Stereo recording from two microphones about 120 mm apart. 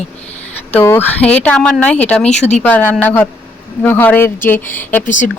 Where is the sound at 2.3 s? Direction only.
70° left (ahead or behind).